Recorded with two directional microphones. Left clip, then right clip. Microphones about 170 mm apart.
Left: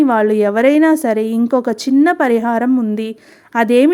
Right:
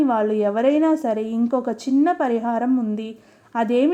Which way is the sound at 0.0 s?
30° left (ahead or behind).